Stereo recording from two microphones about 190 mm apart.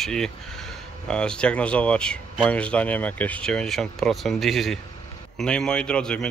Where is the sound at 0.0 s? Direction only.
Centre (ahead or behind).